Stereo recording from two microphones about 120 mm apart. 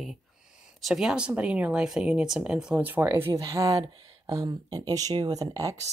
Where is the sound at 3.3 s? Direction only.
30° right (ahead or behind).